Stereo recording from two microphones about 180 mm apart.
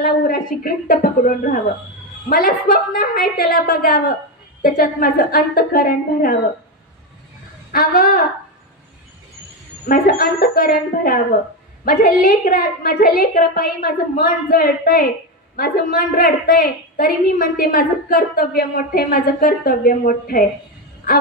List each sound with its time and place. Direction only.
0.0 s a woman's voice: 55° left (ahead or behind)
7.7 s a woman's voice: 50° left (ahead or behind)
9.8 s a woman's voice: 50° left (ahead or behind)